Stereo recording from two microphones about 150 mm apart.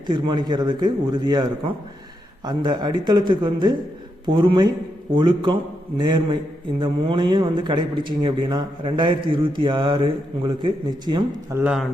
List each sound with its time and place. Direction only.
0.1 s a man's voice: 30° right (ahead or behind)
11.5 s speech: 10° right (ahead or behind)